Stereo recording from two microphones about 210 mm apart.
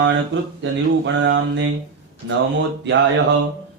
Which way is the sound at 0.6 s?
60° right (ahead or behind).